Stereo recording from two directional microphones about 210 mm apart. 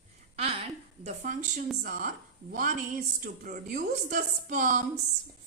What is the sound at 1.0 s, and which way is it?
A woman's voice, 35° right (ahead or behind).